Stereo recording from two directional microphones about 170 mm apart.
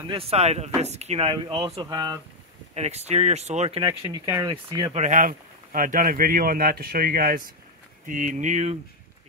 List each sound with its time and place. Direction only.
0.1 s speech: 35° right (ahead or behind)
2.7 s speech: 40° right (ahead or behind)
4.3 s speech: 20° right (ahead or behind)
4.9 s speech: 45° right (ahead or behind)
8.1 s speech: 45° right (ahead or behind)